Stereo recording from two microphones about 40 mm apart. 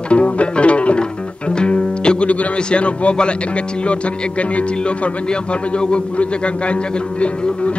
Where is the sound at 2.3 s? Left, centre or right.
Left.